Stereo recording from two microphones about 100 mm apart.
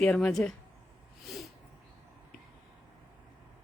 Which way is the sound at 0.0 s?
10° left (ahead or behind).